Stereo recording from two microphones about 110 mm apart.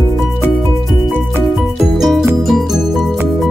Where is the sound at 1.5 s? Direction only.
Centre (ahead or behind).